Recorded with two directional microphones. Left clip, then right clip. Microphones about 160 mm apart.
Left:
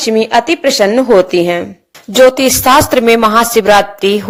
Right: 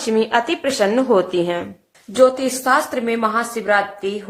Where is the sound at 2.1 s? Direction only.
55° left (ahead or behind).